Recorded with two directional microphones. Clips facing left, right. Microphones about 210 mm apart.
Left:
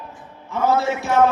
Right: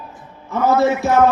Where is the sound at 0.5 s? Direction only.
40° right (ahead or behind).